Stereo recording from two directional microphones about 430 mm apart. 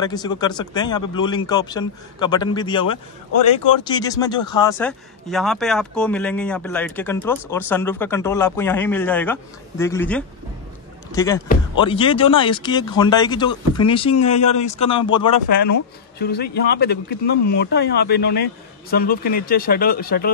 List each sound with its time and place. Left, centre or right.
0.0 s speech: centre
16.2 s speech: left